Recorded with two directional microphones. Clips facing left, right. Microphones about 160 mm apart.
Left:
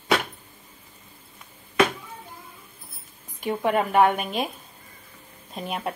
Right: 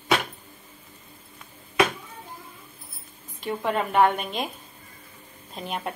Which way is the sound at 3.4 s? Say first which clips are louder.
Left 3 dB; 15° left (ahead or behind).